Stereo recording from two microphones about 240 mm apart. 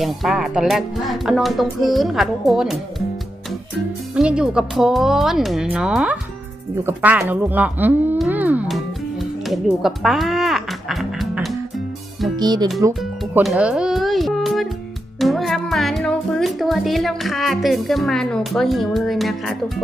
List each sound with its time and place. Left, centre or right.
0.0 s speech: centre
4.1 s speech: centre
6.8 s a sound: centre
12.4 s speech: centre
12.9 s music: centre
15.2 s speech: centre